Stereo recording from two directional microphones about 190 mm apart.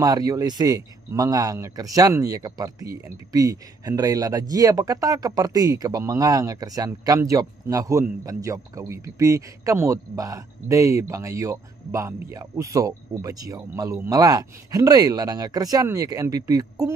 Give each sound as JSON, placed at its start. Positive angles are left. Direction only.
{"t": 0.0, "sound": "speech", "side_deg": -20}